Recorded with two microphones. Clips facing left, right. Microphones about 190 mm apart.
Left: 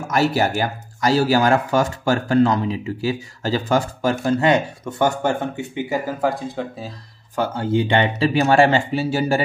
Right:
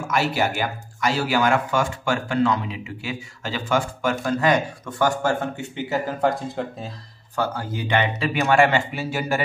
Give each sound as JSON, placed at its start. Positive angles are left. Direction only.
{"t": 0.1, "sound": "speech", "side_deg": 40}
{"t": 6.2, "sound": "speech", "side_deg": 0}
{"t": 7.3, "sound": "speech", "side_deg": 25}